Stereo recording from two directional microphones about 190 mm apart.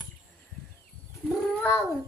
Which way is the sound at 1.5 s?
10° left (ahead or behind).